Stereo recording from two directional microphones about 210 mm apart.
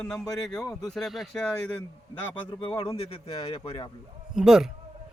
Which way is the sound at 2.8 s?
25° left (ahead or behind).